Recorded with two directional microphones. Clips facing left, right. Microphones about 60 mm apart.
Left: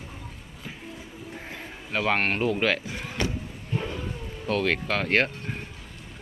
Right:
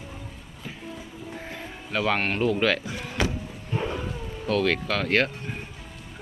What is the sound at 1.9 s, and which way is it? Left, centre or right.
Speech, left.